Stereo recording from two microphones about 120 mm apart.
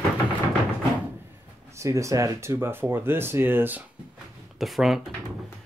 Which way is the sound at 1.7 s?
25° right (ahead or behind).